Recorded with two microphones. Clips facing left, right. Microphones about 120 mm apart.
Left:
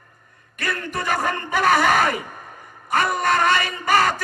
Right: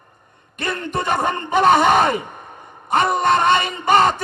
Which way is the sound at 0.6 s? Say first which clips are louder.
Right 3 dB; 25° right (ahead or behind).